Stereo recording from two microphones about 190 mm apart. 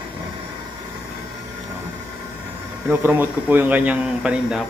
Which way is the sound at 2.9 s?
10° right (ahead or behind).